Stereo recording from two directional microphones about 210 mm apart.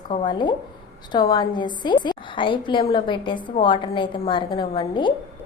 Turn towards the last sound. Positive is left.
turn(degrees=20)  # may be behind; listen again after turning